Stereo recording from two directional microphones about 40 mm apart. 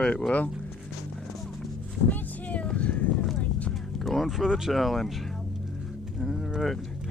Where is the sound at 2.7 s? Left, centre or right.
Left.